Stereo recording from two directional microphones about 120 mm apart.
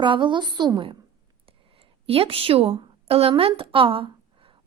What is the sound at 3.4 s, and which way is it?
A woman's voice, 50° right (ahead or behind).